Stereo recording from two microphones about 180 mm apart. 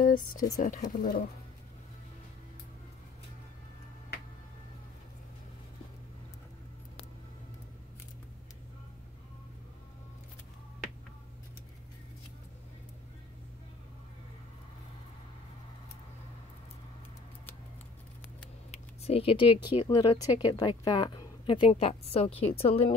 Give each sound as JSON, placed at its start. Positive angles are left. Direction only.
{"t": 0.0, "sound": "speech", "side_deg": 50}
{"t": 18.7, "sound": "a sound", "side_deg": 35}
{"t": 19.8, "sound": "a woman's voice", "side_deg": 20}